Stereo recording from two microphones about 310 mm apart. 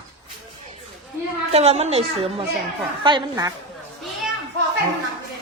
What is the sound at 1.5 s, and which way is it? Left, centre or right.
A woman's voice, right.